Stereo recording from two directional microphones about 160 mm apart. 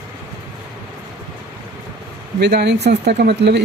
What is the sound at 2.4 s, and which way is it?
Speech, 90° right.